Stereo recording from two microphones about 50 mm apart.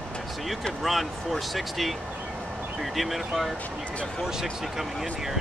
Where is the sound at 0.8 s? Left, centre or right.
Centre.